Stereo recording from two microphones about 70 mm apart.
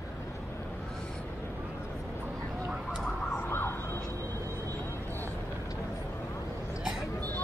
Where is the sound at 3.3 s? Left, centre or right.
Left.